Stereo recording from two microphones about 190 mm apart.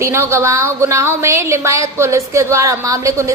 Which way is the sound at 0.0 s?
15° right (ahead or behind).